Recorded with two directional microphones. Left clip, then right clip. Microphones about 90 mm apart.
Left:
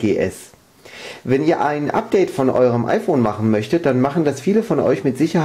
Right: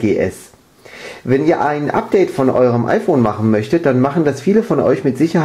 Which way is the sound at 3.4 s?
20° left (ahead or behind).